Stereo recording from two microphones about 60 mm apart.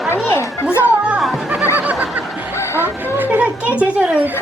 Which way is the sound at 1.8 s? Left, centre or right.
Right.